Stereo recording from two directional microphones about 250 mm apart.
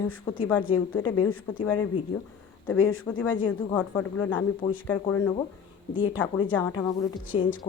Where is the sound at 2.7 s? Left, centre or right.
Left.